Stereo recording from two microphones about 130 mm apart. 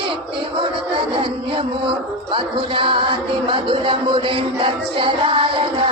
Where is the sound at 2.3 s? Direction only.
40° right (ahead or behind).